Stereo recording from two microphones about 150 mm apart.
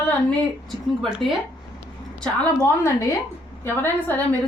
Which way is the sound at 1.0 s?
5° right (ahead or behind).